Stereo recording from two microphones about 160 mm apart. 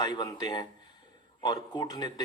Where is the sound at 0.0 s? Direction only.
25° left (ahead or behind).